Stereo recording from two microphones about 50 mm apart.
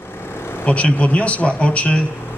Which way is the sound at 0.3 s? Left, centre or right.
Left.